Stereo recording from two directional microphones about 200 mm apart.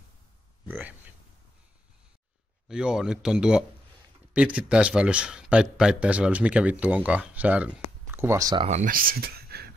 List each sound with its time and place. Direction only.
0.7 s speech: 10° right (ahead or behind)
2.7 s speech: 5° right (ahead or behind)
8.6 s speech: 40° right (ahead or behind)